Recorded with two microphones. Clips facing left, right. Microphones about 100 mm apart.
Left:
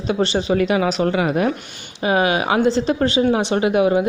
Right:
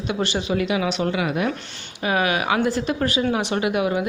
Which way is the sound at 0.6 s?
45° left (ahead or behind).